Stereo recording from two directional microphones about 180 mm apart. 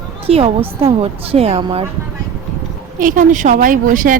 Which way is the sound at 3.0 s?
50° right (ahead or behind).